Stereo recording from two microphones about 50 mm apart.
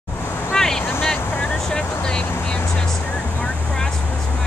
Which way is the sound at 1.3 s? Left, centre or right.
Left.